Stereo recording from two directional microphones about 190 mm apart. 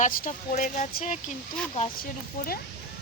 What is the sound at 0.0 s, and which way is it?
A woman's voice, 40° left (ahead or behind).